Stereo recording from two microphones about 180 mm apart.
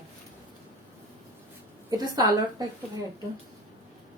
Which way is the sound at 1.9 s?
20° right (ahead or behind).